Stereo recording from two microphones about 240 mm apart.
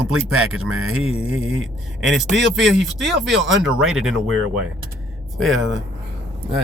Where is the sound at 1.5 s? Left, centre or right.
Right.